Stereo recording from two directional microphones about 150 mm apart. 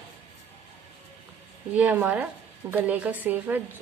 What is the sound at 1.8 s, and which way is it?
A woman's voice, 10° right (ahead or behind).